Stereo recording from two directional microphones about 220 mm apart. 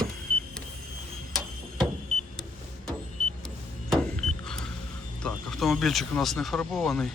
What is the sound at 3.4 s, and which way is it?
Power windows, centre (ahead or behind).